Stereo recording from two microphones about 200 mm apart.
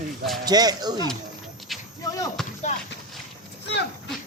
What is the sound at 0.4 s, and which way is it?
Speech, 20° right (ahead or behind).